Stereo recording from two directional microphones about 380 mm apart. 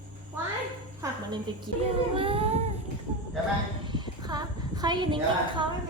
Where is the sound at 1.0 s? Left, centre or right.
Centre.